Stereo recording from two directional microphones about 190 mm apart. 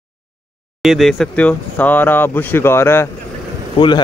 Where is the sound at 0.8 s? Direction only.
Centre (ahead or behind).